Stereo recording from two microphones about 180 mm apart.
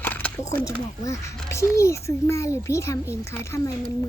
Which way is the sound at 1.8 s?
15° left (ahead or behind).